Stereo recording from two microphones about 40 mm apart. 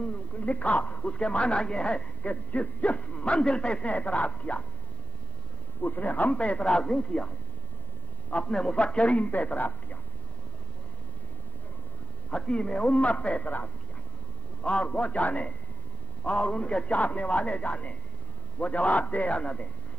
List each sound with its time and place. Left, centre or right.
0.0 s a woman's voice: left
2.2 s a man's voice: left
3.9 s a man's voice: left
5.8 s speech: left
6.3 s speech: left
8.5 s a man's voice: left
12.3 s a man's voice: left
16.3 s a man's voice: left